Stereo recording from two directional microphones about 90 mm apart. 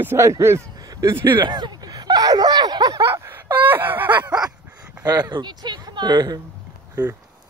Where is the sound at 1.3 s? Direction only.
60° right (ahead or behind).